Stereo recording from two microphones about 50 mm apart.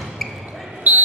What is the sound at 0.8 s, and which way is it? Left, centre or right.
Basketball bounce, right.